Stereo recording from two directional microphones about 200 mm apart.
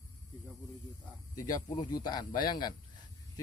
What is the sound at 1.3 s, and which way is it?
Speech, 20° left (ahead or behind).